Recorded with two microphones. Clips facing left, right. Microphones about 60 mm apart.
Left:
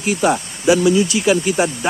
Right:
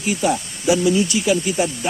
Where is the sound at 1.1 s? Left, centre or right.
Left.